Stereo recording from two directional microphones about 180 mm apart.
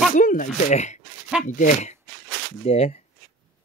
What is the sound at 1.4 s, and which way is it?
Speech, 45° left (ahead or behind).